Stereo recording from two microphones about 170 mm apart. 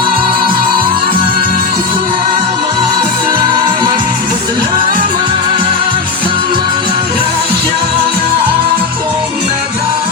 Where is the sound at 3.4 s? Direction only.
25° right (ahead or behind).